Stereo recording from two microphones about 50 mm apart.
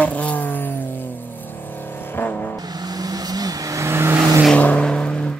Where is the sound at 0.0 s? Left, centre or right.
Left.